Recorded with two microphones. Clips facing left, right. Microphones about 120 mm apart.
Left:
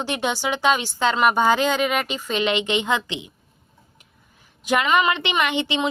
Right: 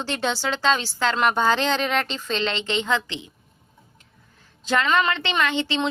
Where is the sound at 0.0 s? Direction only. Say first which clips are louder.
Left 1 dB; 15° left (ahead or behind).